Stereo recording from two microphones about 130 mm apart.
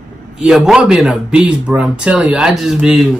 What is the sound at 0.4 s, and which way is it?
Speech, 5° right (ahead or behind).